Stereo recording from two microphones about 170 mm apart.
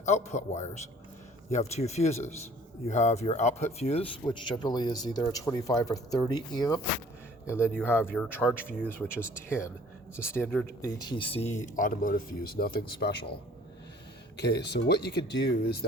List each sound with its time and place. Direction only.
0.0 s speech: 40° left (ahead or behind); by 8.5 s 10° left (ahead or behind)
10.2 s speech: 15° left (ahead or behind); by 12.8 s 60° left (ahead or behind)
13.0 s a man's voice: 80° left
14.3 s speech: 80° left